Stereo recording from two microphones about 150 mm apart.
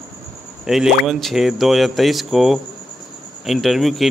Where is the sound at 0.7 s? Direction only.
Centre (ahead or behind).